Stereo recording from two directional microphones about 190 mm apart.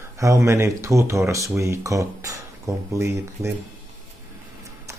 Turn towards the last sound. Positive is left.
turn(degrees=-15)  # may be behind; listen again after turning